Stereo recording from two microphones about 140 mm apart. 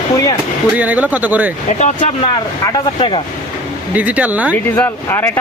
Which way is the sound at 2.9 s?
40° left (ahead or behind).